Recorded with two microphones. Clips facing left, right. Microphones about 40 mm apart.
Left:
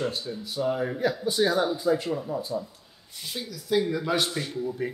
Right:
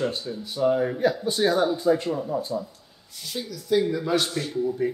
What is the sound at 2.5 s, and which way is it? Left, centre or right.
Speech, centre.